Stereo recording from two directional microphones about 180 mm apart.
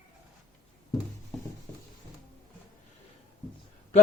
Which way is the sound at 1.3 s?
Centre (ahead or behind).